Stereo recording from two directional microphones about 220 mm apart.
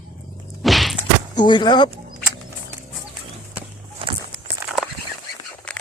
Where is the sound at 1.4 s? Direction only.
20° left (ahead or behind).